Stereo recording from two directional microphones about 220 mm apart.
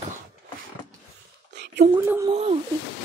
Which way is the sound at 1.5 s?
50° right (ahead or behind).